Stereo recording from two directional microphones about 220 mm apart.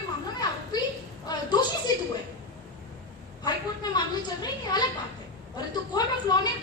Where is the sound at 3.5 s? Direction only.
20° left (ahead or behind).